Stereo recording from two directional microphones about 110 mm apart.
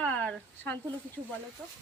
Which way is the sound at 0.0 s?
10° left (ahead or behind).